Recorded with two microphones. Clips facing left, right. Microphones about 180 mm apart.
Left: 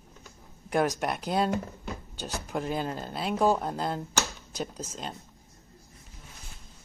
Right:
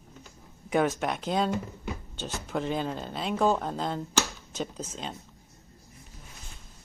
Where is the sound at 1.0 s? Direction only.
5° left (ahead or behind).